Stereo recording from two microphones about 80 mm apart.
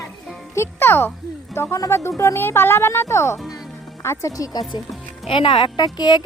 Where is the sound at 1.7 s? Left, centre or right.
Left.